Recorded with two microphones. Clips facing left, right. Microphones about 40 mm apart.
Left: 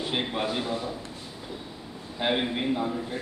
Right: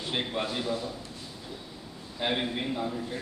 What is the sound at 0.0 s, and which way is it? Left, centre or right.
Speech, centre.